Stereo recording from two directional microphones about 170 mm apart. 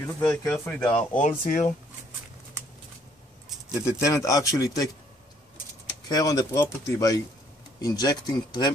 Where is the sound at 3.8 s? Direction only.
20° left (ahead or behind).